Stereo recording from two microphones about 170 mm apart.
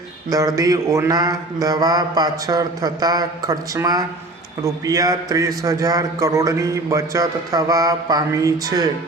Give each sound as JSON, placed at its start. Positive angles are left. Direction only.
{"t": 0.3, "sound": "speech", "side_deg": -20}